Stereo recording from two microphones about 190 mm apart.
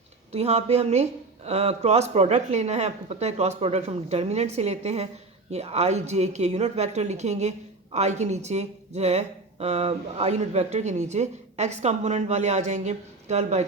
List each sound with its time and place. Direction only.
0.3 s a woman's voice: 35° right (ahead or behind)